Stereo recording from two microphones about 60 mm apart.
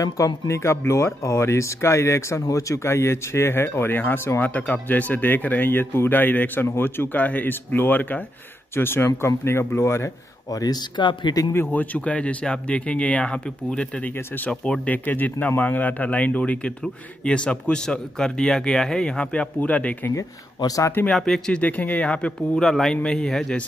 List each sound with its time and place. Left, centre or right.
0.0 s speech: left
0.6 s speech: left
8.7 s speech: left
10.5 s speech: left
11.5 s speech: left
14.1 s speech: left
14.5 s a man's voice: centre
20.2 s speech: left
21.1 s speech: centre
21.5 s a man's voice: left; by 23.6 s centre